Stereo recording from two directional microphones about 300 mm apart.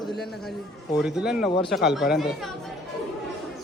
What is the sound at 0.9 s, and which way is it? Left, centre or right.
A man's voice, centre.